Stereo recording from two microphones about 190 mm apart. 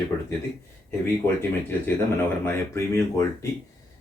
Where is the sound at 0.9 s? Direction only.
10° left (ahead or behind).